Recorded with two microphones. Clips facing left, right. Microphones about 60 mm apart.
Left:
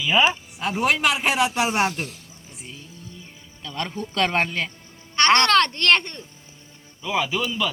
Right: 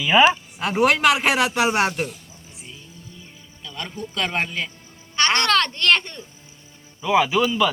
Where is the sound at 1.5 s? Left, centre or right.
Centre.